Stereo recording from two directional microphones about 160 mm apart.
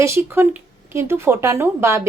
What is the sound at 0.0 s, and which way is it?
A woman's voice, 15° right (ahead or behind).